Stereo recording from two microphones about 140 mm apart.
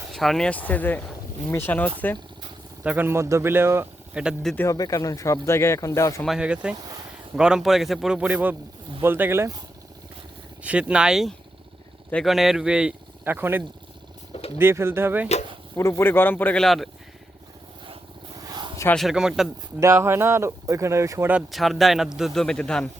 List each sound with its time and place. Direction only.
0.1 s speech: centre (ahead or behind)
2.8 s speech: 10° right (ahead or behind)
4.2 s a man's voice: 5° right (ahead or behind)
4.5 s speech: 20° left (ahead or behind)
6.2 s a man's voice: 5° right (ahead or behind)
10.6 s speech: 10° right (ahead or behind)
15.7 s speech: 20° left (ahead or behind)
16.6 s a man's voice: centre (ahead or behind)
18.4 s a sound: 30° right (ahead or behind)
18.9 s a man's voice: 5° right (ahead or behind)
19.8 s speech: 20° right (ahead or behind)
21.5 s a man's voice: centre (ahead or behind)